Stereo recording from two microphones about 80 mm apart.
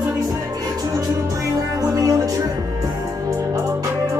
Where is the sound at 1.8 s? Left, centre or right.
Right.